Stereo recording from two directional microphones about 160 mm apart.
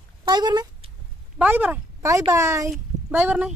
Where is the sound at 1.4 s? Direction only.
10° right (ahead or behind).